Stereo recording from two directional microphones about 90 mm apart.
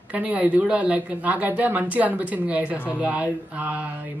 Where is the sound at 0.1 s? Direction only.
15° right (ahead or behind).